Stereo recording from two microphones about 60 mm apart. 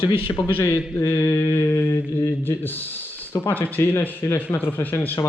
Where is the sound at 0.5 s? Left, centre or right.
Left.